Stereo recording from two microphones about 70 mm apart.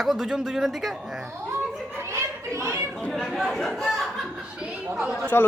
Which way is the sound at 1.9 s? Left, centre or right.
Right.